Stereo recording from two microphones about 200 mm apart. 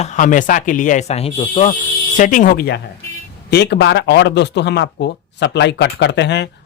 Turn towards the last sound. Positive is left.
turn(degrees=60)  # may be behind; listen again after turning